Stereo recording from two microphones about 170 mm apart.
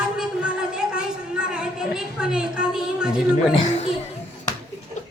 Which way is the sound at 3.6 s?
45° left (ahead or behind).